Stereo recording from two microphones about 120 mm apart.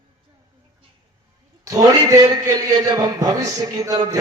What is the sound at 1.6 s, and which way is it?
A man's voice, 30° right (ahead or behind).